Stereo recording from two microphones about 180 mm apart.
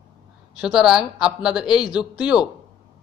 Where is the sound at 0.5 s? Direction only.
5° right (ahead or behind).